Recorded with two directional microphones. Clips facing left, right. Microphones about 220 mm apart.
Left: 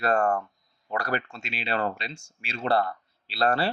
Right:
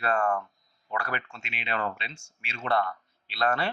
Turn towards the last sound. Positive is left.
turn(degrees=35)  # may be behind; listen again after turning